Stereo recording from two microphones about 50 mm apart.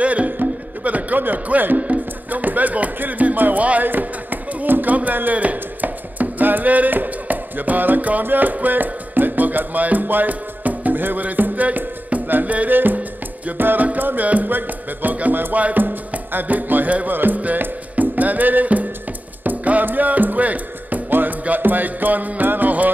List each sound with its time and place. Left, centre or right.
0.0 s music: right
1.9 s speech: right
13.5 s music: right
19.4 s speech: right